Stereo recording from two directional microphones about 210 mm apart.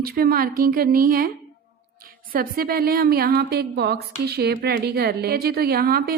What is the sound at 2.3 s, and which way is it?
A woman's voice, 45° right (ahead or behind).